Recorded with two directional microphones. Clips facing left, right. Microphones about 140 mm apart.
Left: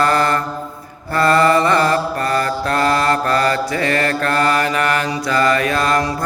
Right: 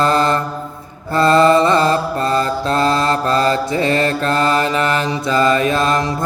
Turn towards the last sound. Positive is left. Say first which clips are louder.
# right 1 dB
turn(degrees=-20)  # may be behind; listen again after turning